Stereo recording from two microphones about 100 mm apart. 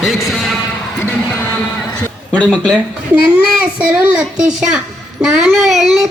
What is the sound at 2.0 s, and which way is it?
Speech, 10° left (ahead or behind).